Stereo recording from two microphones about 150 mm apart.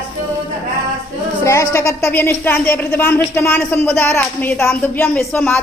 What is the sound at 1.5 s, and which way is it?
Speech, 20° left (ahead or behind).